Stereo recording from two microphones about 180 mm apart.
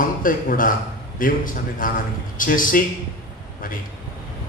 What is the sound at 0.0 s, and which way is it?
A man's voice, 50° left (ahead or behind).